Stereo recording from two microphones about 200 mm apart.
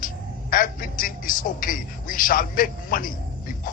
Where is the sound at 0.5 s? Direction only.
45° left (ahead or behind).